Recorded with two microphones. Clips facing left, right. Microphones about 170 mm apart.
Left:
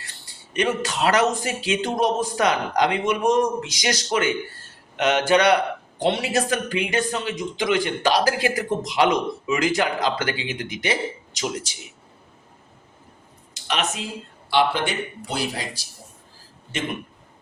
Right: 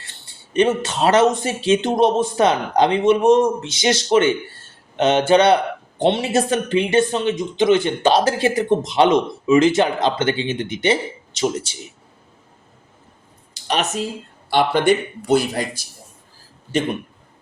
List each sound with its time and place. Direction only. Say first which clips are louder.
0.5 s speech: right 6 dB; 25° right (ahead or behind)
13.5 s speech: right 4 dB; 35° right (ahead or behind)